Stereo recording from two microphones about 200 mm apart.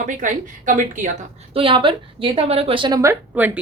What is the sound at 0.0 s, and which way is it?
A woman's voice, 40° right (ahead or behind).